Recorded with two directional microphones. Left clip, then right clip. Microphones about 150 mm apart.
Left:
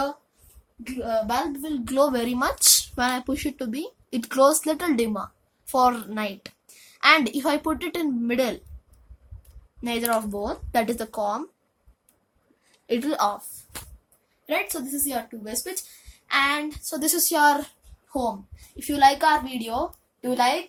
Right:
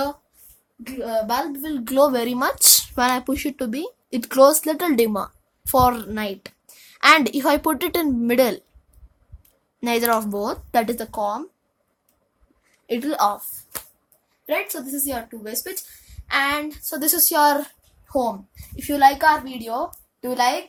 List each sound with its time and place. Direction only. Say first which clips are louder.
0.9 s speech: right 2 dB; 45° right (ahead or behind)
9.8 s a woman's voice: right 5 dB; 55° right (ahead or behind)
10.9 s a woman's voice: right 2 dB; 20° right (ahead or behind)
12.9 s a woman's voice: right 1 dB; 10° right (ahead or behind)
13.7 s a sound: right 4 dB; 65° right (ahead or behind)
14.4 s speech: right 2 dB; 35° right (ahead or behind)
16.2 s a woman's voice: right 1 dB; 45° right (ahead or behind)
19.3 s a child's voice: right 3 dB; 25° right (ahead or behind)